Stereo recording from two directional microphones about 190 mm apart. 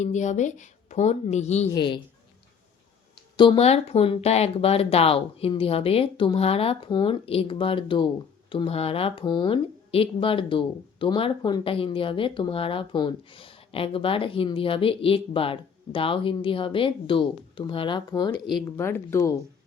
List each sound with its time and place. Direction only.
0.0 s a woman's voice: 40° left (ahead or behind)
1.7 s speech: 25° left (ahead or behind)
3.3 s speech: 25° left (ahead or behind)